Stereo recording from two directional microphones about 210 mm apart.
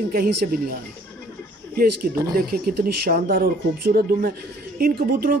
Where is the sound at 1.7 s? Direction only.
45° right (ahead or behind).